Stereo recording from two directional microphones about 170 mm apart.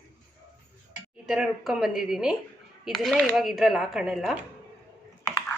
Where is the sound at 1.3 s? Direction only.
Centre (ahead or behind).